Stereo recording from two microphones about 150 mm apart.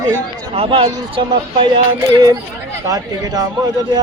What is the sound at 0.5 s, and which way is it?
Speech, 40° right (ahead or behind).